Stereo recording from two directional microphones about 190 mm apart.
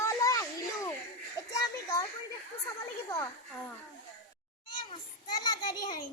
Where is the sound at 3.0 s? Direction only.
20° left (ahead or behind).